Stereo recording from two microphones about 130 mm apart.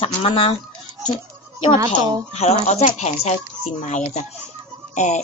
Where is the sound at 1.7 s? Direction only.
25° right (ahead or behind).